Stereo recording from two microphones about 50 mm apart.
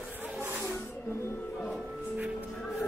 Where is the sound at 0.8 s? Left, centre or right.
Left.